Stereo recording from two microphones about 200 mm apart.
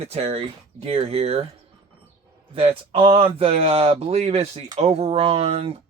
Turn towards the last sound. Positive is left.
turn(degrees=-30)  # may be behind; listen again after turning